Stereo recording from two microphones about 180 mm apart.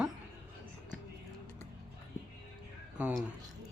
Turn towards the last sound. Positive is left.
turn(degrees=-5)  # may be behind; listen again after turning